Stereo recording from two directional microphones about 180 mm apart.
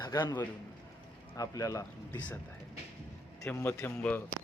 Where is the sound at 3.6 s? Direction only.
15° left (ahead or behind).